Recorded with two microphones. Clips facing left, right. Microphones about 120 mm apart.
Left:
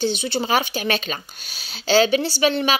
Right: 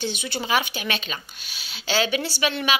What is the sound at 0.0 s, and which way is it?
A woman's voice, 30° left (ahead or behind).